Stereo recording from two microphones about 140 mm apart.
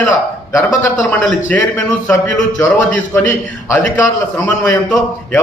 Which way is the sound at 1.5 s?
10° left (ahead or behind).